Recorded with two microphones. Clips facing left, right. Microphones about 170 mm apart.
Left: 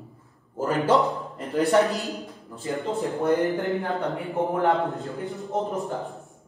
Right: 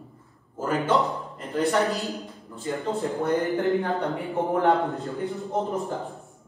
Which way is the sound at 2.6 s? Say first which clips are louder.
Even; 20° left (ahead or behind).